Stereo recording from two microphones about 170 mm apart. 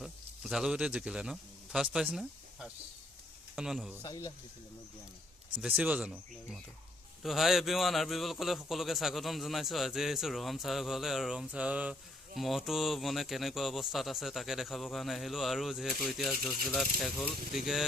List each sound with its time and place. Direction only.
0.0 s a man's voice: centre (ahead or behind)
4.0 s speech: 20° left (ahead or behind)
5.6 s a man's voice: 10° right (ahead or behind)